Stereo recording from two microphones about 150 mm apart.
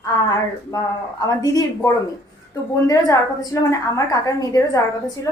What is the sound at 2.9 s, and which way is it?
A woman's voice, 20° left (ahead or behind).